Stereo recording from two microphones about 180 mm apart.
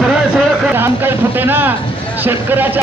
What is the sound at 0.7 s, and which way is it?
Speech, 10° right (ahead or behind).